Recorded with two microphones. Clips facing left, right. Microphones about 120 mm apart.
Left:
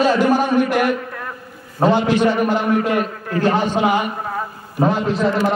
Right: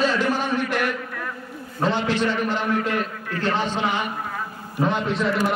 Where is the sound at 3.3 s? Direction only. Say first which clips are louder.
Left 7 dB; 50° left (ahead or behind).